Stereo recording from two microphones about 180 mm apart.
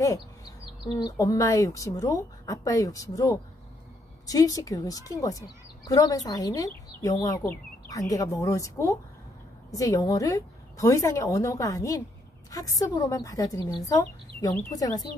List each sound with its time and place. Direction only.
0.9 s speech: 20° left (ahead or behind)
4.3 s a woman's voice: 20° left (ahead or behind)